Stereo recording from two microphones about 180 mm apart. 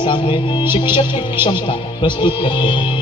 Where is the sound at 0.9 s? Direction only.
30° left (ahead or behind).